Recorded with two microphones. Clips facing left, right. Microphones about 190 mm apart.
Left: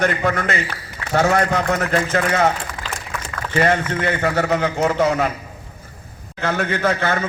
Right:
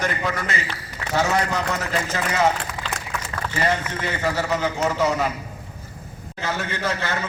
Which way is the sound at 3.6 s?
55° left (ahead or behind).